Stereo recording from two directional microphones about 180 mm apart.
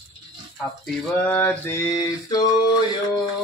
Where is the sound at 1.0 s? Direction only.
5° left (ahead or behind).